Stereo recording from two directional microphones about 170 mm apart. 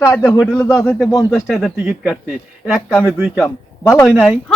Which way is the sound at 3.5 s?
20° left (ahead or behind).